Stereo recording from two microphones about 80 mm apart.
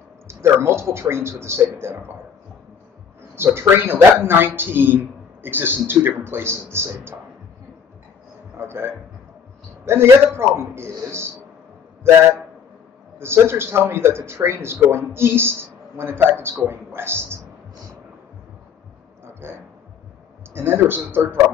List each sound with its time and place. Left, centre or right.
0.3 s a man's voice: right
3.3 s speech: right
8.5 s a man's voice: right
13.2 s a man's voice: right
19.4 s a sound: right
20.5 s speech: right